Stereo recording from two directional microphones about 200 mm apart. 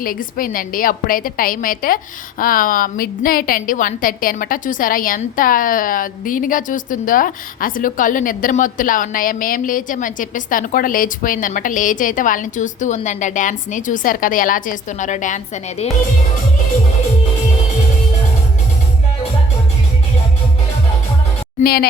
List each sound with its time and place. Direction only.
0.0 s a woman's voice: 45° left (ahead or behind)
21.6 s a woman's voice: 50° left (ahead or behind)